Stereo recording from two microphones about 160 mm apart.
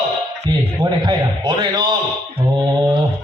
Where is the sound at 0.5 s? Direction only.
25° right (ahead or behind).